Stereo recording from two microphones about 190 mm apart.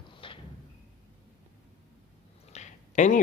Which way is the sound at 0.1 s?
25° left (ahead or behind).